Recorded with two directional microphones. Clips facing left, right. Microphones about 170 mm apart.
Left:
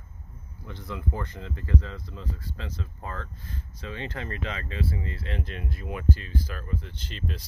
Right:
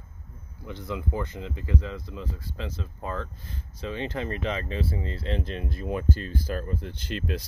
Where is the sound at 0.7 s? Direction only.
15° right (ahead or behind).